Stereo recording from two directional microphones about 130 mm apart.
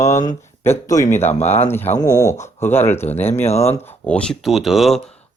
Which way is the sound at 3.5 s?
55° left (ahead or behind).